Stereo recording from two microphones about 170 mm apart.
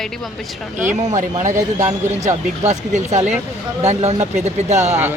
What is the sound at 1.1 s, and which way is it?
Speech, 45° right (ahead or behind).